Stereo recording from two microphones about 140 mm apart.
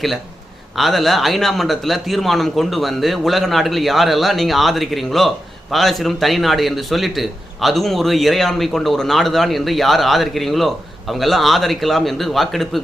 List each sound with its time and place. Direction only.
0.8 s a man's voice: centre (ahead or behind)